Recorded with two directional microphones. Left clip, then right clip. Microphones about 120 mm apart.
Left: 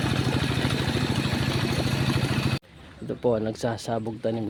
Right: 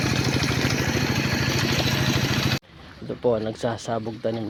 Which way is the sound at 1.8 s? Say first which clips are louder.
Right 4 dB; 30° right (ahead or behind).